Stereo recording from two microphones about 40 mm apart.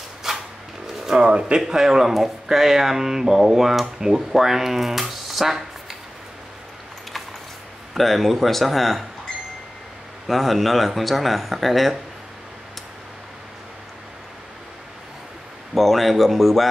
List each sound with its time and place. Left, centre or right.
0.2 s a sound: centre
1.1 s speech: right
1.7 s speech: centre
7.9 s speech: centre
10.2 s speech: centre
15.7 s speech: centre